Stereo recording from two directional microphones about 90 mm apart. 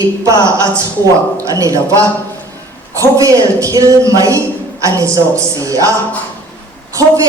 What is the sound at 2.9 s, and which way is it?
A woman's voice, 40° right (ahead or behind).